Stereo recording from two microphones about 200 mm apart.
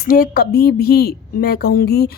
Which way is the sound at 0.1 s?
45° left (ahead or behind).